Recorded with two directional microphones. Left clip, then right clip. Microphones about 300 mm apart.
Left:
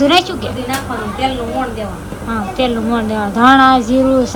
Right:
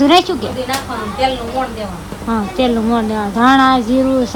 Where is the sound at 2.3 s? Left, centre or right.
Centre.